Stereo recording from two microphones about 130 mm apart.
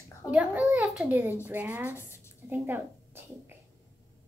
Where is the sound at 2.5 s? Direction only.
15° right (ahead or behind).